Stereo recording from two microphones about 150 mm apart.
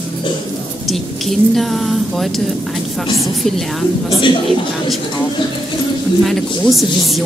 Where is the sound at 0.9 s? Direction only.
Centre (ahead or behind).